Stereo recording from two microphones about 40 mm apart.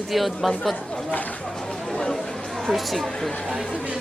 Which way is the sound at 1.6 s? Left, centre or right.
Left.